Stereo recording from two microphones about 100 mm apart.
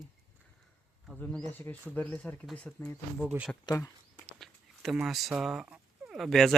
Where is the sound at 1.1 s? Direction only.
15° left (ahead or behind).